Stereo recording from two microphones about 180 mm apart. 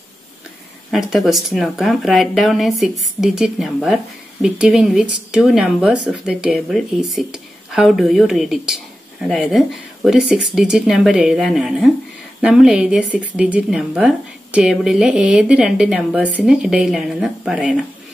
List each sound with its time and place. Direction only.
0.9 s speech: centre (ahead or behind)